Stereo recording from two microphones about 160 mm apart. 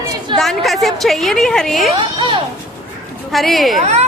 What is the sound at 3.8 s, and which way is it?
Speech, 45° right (ahead or behind).